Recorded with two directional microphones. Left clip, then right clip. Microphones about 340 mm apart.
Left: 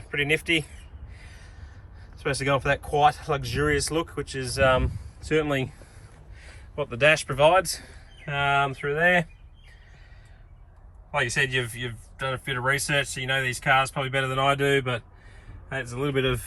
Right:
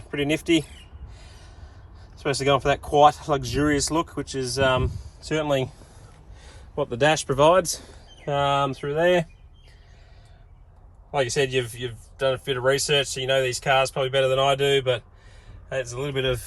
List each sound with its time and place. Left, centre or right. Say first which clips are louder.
0.1 s speech: right 1 dB; centre
2.1 s speech: right 3 dB; centre
6.7 s speech: even; centre
12.3 s speech: right 2 dB; centre